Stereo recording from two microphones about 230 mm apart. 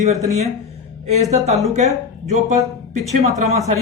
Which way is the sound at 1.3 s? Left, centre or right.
Right.